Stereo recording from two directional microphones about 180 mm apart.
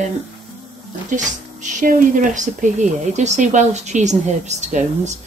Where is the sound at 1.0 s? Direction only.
45° right (ahead or behind).